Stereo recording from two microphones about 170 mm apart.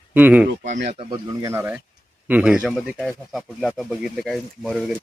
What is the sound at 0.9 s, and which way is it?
Speech, 30° right (ahead or behind).